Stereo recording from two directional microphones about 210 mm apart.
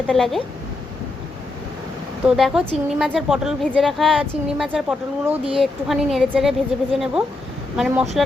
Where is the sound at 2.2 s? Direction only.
Centre (ahead or behind).